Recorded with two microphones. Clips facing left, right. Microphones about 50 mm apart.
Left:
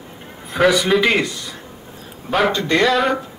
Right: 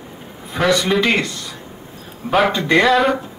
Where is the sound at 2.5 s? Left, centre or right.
Centre.